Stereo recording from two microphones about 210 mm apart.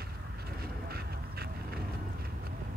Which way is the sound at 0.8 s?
50° right (ahead or behind).